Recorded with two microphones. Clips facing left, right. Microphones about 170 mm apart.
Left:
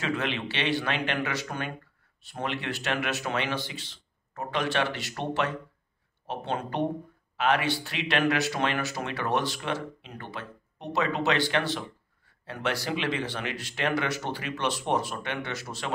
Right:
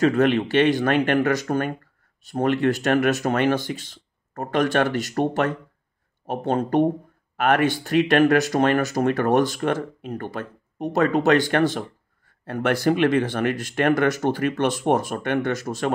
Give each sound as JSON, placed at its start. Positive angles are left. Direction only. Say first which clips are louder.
{"t": 0.0, "sound": "speech", "louder": "right 12 dB", "side_deg": -45}